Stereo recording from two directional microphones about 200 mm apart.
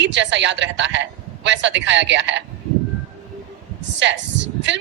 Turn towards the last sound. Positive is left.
turn(degrees=-60)  # may be behind; listen again after turning